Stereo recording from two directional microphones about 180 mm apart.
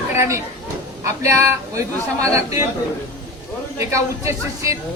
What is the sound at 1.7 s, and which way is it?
Speech, 15° right (ahead or behind).